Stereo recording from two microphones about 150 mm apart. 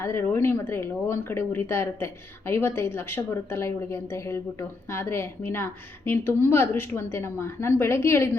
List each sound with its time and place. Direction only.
0.0 s speech: 15° left (ahead or behind)